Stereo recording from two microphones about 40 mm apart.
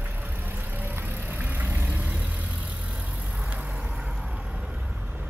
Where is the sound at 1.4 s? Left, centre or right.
Right.